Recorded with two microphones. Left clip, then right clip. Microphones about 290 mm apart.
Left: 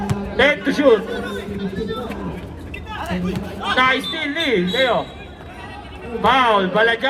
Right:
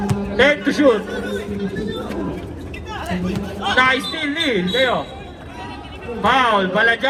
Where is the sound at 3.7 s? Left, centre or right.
Left.